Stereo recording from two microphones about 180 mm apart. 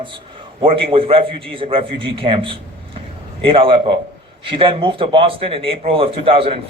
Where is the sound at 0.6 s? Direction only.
30° right (ahead or behind).